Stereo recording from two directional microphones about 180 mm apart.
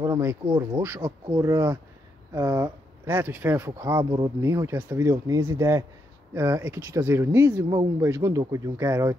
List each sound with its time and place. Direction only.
0.0 s speech: 15° right (ahead or behind)